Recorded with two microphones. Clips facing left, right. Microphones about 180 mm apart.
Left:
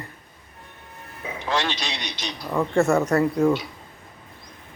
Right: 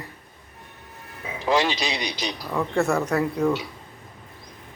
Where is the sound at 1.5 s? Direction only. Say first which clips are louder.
Right 4 dB; 15° right (ahead or behind).